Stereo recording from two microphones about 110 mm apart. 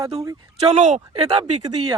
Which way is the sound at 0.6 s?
90° right.